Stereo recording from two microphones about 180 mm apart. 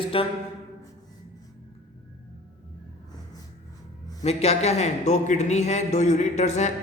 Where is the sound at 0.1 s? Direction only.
30° left (ahead or behind).